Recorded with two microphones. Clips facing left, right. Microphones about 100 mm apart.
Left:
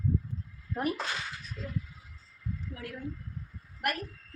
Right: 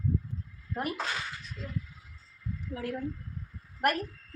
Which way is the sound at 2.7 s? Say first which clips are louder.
Right 5 dB; 35° right (ahead or behind).